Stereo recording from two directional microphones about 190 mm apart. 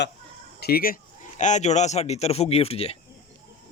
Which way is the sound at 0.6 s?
50° left (ahead or behind).